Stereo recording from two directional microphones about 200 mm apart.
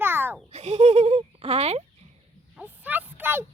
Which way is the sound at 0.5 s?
35° right (ahead or behind).